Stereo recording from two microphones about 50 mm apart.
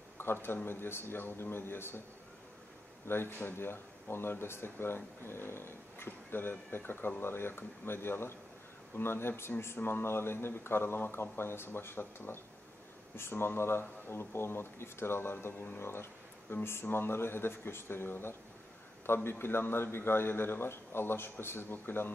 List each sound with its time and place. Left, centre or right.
0.2 s a man's voice: left
3.1 s speech: left
9.5 s speech: centre
9.8 s speech: left